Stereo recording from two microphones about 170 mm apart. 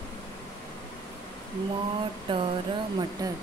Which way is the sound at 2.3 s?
30° right (ahead or behind).